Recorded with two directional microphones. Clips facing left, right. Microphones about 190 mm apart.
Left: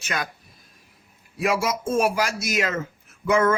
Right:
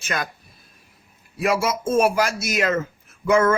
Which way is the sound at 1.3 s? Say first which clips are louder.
Right 2 dB; 5° left (ahead or behind).